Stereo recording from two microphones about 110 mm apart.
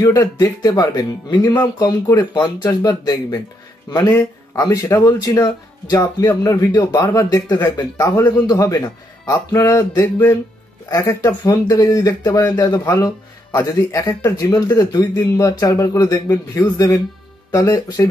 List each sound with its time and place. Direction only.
0.0 s speech: 30° left (ahead or behind)
4.1 s speech: 25° left (ahead or behind)
10.0 s speech: 15° left (ahead or behind)
10.9 s speech: 30° left (ahead or behind)